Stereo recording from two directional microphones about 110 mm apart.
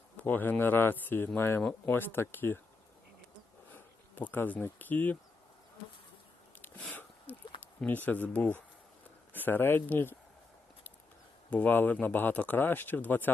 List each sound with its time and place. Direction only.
0.2 s speech: 15° left (ahead or behind)
3.8 s speech: 15° left (ahead or behind)
6.6 s a sound: 15° left (ahead or behind)
7.6 s speech: 15° left (ahead or behind)
11.5 s speech: 15° left (ahead or behind)